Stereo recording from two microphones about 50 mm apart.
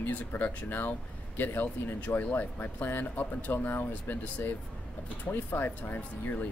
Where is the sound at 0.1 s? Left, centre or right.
Left.